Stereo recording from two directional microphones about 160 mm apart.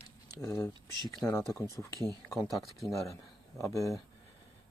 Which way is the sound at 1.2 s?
5° left (ahead or behind).